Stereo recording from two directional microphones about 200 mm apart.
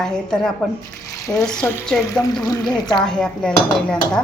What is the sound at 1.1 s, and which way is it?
A woman's voice, 15° left (ahead or behind).